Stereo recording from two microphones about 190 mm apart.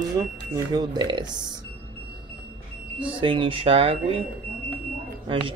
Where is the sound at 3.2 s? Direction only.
25° right (ahead or behind).